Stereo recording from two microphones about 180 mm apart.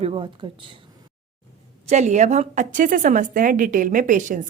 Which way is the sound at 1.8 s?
40° right (ahead or behind).